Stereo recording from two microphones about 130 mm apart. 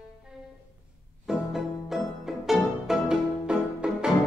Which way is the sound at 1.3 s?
5° right (ahead or behind).